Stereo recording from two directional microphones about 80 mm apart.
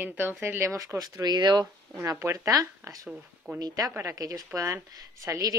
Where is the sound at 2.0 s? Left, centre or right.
Right.